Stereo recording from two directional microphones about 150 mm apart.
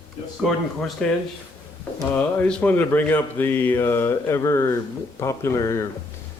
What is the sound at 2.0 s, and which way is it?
Speech, 5° left (ahead or behind).